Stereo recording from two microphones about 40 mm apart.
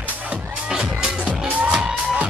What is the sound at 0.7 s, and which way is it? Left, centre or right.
Music, centre.